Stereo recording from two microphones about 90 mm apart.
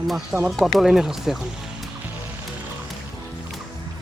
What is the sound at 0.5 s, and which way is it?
Speech, centre (ahead or behind).